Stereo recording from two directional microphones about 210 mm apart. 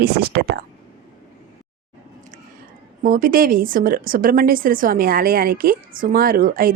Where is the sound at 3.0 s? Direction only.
40° right (ahead or behind).